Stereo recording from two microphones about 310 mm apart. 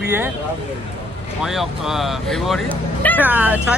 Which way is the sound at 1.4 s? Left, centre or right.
Centre.